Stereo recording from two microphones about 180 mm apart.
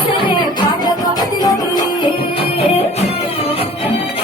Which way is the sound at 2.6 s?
35° left (ahead or behind).